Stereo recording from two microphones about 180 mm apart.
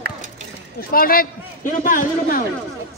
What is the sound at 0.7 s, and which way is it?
A man's voice, 55° left (ahead or behind).